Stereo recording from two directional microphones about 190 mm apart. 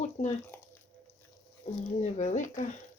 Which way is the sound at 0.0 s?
35° left (ahead or behind).